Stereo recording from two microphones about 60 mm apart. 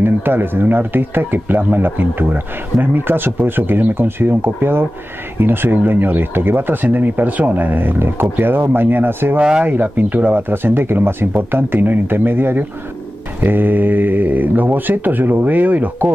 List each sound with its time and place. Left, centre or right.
0.0 s speech: right
9.4 s speech: centre
9.7 s speech: right